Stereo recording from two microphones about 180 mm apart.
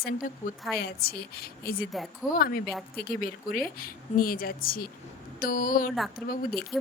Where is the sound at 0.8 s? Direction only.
55° left (ahead or behind).